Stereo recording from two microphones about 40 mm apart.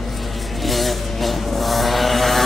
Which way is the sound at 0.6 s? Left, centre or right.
Centre.